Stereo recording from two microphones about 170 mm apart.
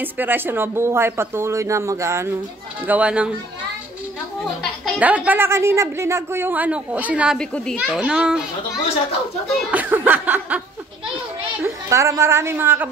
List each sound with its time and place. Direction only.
0.0 s a woman's voice: 10° right (ahead or behind)
4.9 s a woman's voice: 10° right (ahead or behind)
7.3 s a child's voice: 5° left (ahead or behind)
7.8 s a child's voice: 5° right (ahead or behind)
9.7 s chuckle: 10° right (ahead or behind)
11.6 s a woman's voice: 20° right (ahead or behind)